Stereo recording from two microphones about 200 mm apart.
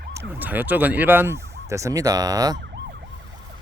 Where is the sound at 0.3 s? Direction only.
10° right (ahead or behind).